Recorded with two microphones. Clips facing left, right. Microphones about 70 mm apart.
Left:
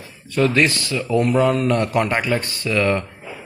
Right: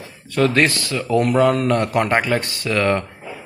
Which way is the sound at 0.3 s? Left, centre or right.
Right.